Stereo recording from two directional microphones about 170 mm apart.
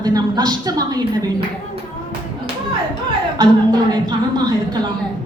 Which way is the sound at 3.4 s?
25° right (ahead or behind).